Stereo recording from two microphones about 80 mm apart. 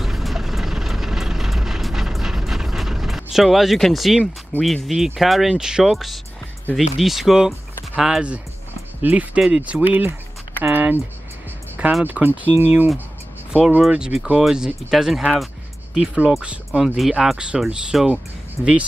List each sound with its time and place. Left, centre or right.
0.0 s vehicle: centre
4.6 s speech: centre; by 10.1 s right
10.6 s a sound: right
12.0 s speech: right
13.5 s speech: centre